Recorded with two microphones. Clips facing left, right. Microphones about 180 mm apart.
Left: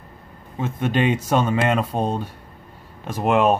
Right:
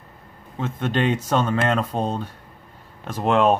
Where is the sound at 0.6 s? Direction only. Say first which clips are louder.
Left 2 dB; 10° left (ahead or behind).